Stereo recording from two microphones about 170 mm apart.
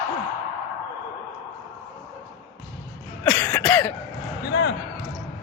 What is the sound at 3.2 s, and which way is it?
Speech, 5° left (ahead or behind).